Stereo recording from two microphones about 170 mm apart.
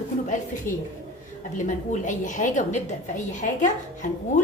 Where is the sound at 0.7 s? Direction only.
50° left (ahead or behind).